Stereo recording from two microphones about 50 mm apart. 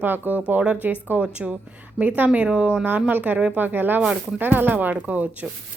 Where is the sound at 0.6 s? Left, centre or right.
Right.